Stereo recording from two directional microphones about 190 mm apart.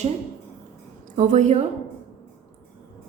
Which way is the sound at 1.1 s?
40° right (ahead or behind).